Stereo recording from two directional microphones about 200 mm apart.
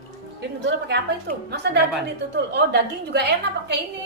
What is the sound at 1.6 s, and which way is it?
A woman's voice, 55° right (ahead or behind).